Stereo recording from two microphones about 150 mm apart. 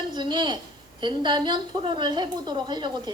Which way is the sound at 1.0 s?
30° right (ahead or behind).